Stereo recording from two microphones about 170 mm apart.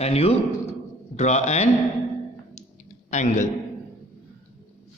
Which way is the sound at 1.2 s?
45° left (ahead or behind).